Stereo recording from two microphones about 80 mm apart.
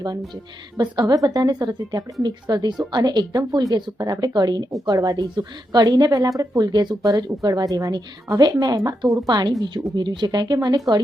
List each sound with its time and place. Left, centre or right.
0.8 s a woman's voice: right